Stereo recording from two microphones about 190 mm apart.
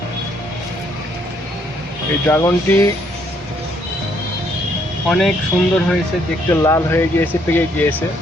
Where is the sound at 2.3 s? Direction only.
10° left (ahead or behind).